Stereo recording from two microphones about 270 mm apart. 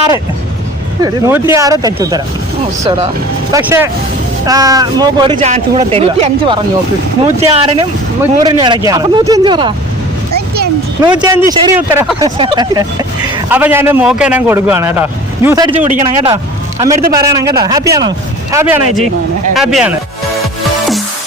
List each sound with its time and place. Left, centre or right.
1.0 s a man's voice: centre
3.5 s a man's voice: centre
10.3 s a sound: right
11.0 s a man's voice: centre
15.8 s a man's voice: right
16.3 s a man's voice: centre
20.4 s music: centre